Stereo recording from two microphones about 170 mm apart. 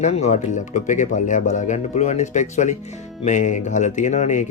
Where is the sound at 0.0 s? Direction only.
40° left (ahead or behind).